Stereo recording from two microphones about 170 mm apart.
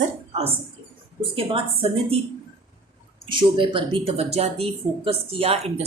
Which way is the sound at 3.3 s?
30° right (ahead or behind).